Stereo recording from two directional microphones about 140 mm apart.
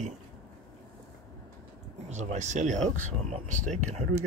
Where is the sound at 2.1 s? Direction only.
60° right (ahead or behind).